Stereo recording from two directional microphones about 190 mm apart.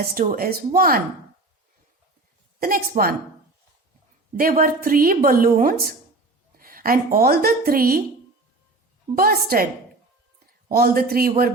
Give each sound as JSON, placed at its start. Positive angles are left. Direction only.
{"t": 0.0, "sound": "a woman's voice", "side_deg": -50}
{"t": 2.6, "sound": "a woman's voice", "side_deg": -50}
{"t": 4.4, "sound": "a woman's voice", "side_deg": -50}
{"t": 9.1, "sound": "a woman's voice", "side_deg": -50}
{"t": 10.7, "sound": "a woman's voice", "side_deg": -50}